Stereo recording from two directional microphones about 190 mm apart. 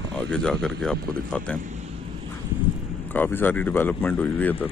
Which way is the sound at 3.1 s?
10° left (ahead or behind).